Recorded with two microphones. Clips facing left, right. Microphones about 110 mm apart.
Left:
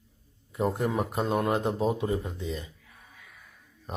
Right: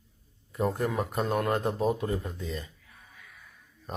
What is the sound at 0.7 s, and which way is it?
Speech, 20° left (ahead or behind).